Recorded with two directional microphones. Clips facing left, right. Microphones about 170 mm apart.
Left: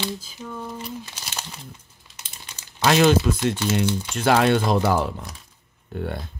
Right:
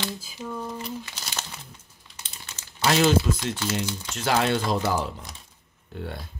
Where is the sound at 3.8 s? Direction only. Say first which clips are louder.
Left 7 dB; 60° left (ahead or behind).